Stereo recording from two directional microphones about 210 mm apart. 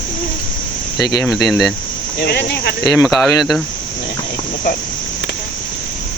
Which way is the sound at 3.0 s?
Centre (ahead or behind).